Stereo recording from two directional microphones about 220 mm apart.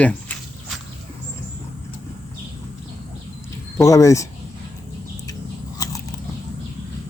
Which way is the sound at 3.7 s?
15° left (ahead or behind).